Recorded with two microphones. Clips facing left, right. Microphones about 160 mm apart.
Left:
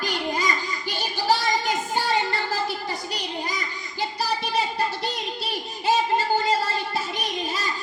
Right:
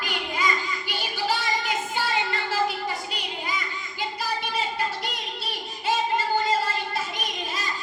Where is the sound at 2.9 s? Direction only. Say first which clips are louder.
Left 1 dB; 40° left (ahead or behind).